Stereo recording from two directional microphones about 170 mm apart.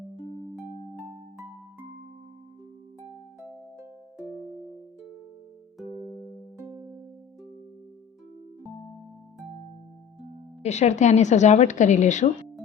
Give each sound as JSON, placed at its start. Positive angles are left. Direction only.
{"t": 0.9, "sound": "music", "side_deg": -15}
{"t": 6.6, "sound": "music", "side_deg": -20}
{"t": 10.6, "sound": "a woman's voice", "side_deg": 40}